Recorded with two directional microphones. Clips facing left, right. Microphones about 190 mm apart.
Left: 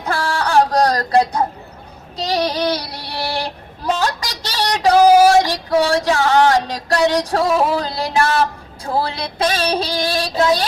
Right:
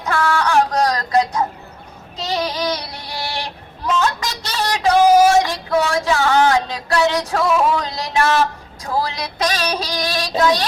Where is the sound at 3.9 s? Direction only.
35° left (ahead or behind).